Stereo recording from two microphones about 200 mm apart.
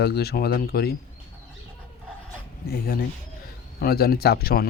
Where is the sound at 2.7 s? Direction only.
45° left (ahead or behind).